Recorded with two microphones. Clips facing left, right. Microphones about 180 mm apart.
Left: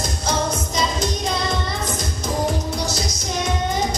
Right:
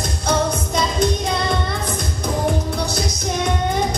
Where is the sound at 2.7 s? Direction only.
60° right (ahead or behind).